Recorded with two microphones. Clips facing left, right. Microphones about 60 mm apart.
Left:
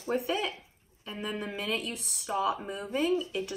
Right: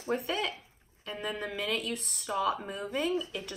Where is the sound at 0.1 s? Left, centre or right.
Centre.